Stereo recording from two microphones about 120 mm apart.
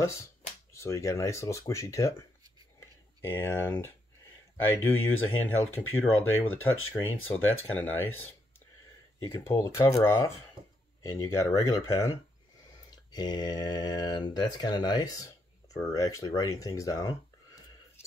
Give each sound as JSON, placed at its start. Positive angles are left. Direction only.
{"t": 0.0, "sound": "speech", "side_deg": 25}
{"t": 3.2, "sound": "speech", "side_deg": 20}
{"t": 9.3, "sound": "speech", "side_deg": 20}
{"t": 13.1, "sound": "speech", "side_deg": 35}